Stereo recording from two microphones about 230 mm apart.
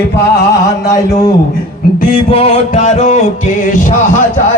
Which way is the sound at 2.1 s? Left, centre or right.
Left.